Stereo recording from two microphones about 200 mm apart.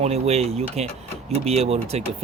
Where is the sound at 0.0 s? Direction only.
30° right (ahead or behind).